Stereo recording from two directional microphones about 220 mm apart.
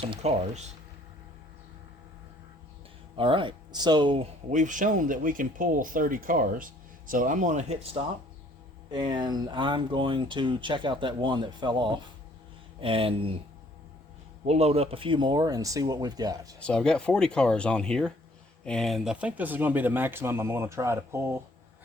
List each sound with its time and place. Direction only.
0.0 s speech: 30° right (ahead or behind)
3.2 s speech: 25° right (ahead or behind)
4.5 s speech: 35° right (ahead or behind)
14.4 s speech: 30° right (ahead or behind)
16.6 s speech: 5° left (ahead or behind); by 21.2 s 10° right (ahead or behind)